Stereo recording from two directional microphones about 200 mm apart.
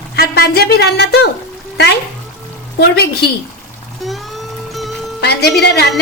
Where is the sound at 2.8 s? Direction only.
55° left (ahead or behind).